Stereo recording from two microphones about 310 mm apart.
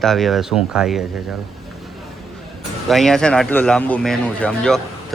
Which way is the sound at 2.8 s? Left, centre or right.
Centre.